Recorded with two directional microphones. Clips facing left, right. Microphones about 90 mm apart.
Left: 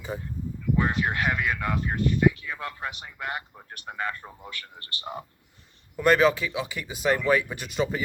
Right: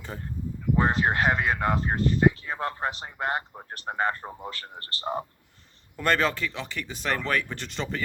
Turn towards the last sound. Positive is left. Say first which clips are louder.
# left 5 dB
turn(degrees=10)  # may be behind; listen again after turning